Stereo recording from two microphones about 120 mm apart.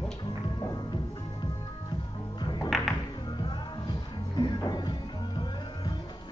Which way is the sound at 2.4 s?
40° left (ahead or behind).